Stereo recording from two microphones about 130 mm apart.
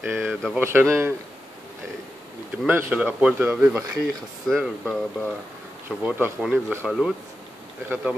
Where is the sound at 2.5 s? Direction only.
10° right (ahead or behind).